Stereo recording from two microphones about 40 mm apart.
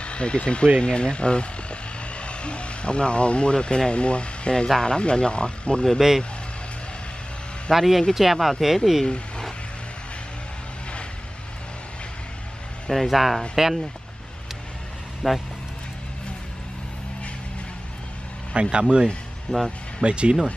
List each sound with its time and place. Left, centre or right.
0.0 s speech: left
5.9 s speech: centre
7.7 s speech: centre
12.9 s speech: centre
15.2 s speech: centre
18.5 s speech: right
19.5 s speech: centre
20.0 s speech: right